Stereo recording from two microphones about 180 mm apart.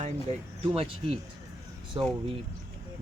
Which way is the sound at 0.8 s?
30° right (ahead or behind).